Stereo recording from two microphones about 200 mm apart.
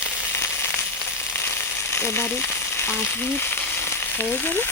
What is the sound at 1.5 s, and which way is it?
Frying, 10° left (ahead or behind).